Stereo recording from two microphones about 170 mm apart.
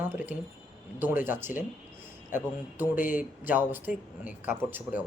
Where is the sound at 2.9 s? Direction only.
50° left (ahead or behind).